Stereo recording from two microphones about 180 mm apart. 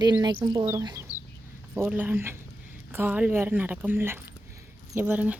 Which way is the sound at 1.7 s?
10° right (ahead or behind).